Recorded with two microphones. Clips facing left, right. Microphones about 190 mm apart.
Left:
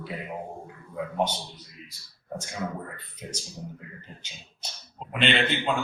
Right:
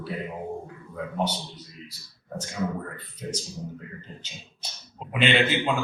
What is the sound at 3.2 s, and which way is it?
Speech, 15° left (ahead or behind).